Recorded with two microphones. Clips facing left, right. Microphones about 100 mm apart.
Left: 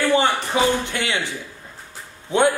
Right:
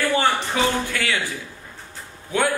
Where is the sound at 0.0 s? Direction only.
20° left (ahead or behind).